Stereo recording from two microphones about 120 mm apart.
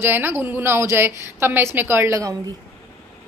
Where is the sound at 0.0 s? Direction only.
20° right (ahead or behind).